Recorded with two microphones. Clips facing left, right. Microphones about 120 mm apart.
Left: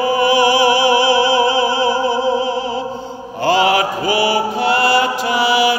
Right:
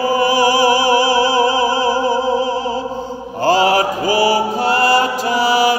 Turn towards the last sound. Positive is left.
turn(degrees=-40)  # may be behind; listen again after turning